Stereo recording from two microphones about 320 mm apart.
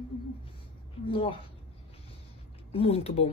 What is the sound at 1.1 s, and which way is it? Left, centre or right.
Speech, centre.